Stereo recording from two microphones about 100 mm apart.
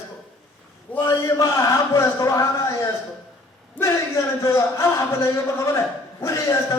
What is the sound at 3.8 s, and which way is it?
Speech, 30° left (ahead or behind).